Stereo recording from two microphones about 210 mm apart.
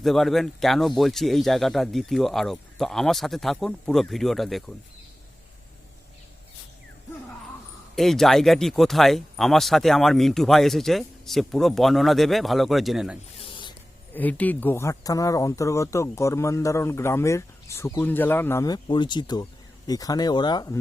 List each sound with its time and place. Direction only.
0.0 s speech: centre (ahead or behind)
7.9 s speech: centre (ahead or behind)
13.4 s a sound: 25° left (ahead or behind)
14.1 s speech: 10° left (ahead or behind)